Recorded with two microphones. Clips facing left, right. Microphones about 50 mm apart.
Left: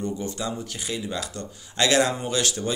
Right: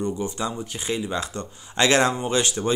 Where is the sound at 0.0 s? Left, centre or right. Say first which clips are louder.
Right 3 dB; right.